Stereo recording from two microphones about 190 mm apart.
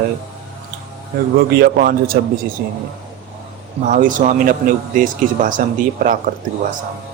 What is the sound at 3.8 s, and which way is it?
Speech, 45° right (ahead or behind).